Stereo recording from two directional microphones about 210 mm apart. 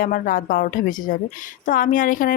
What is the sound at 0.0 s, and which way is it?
A woman's voice, 40° left (ahead or behind).